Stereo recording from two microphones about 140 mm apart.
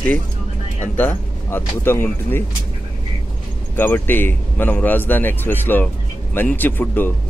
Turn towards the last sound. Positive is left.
turn(degrees=15)  # may be behind; listen again after turning